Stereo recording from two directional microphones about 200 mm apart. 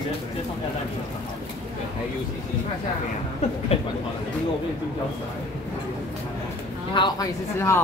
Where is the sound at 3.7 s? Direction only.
30° left (ahead or behind).